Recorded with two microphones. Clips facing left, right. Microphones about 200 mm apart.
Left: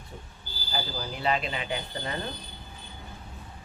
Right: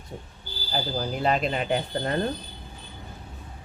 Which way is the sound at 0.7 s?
45° right (ahead or behind).